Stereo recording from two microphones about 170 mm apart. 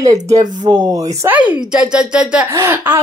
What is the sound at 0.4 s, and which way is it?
Speech, 25° right (ahead or behind).